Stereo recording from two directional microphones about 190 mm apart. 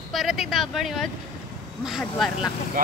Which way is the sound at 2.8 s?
50° right (ahead or behind).